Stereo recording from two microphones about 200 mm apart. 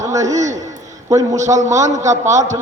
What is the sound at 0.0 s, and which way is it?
A man's voice, 15° right (ahead or behind).